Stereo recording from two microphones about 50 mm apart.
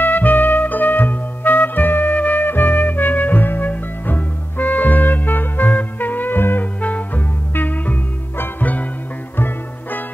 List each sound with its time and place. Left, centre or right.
0.0 s music: left
6.8 s music: left